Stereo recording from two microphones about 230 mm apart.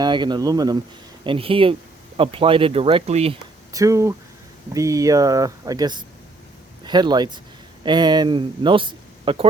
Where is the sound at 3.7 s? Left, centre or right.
Centre.